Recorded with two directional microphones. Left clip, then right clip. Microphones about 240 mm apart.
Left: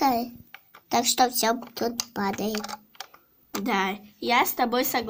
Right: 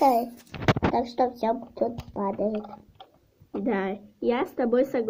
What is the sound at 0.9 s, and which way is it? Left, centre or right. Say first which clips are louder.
Speech: left 3 dB; left.